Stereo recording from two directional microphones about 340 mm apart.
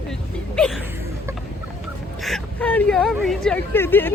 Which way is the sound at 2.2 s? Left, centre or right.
Centre.